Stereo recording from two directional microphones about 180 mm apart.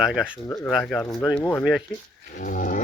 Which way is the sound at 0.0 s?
5° right (ahead or behind).